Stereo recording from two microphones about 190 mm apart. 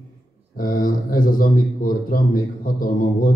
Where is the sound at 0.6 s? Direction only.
45° left (ahead or behind).